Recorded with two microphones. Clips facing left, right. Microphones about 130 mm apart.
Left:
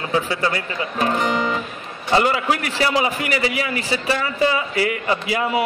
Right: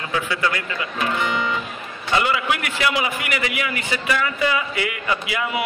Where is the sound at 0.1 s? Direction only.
30° left (ahead or behind).